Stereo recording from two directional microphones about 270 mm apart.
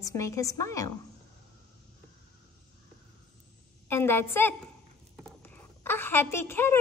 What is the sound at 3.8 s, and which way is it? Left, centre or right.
Child singing, centre.